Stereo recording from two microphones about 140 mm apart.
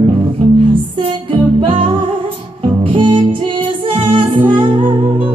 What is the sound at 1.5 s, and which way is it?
Music, 40° right (ahead or behind).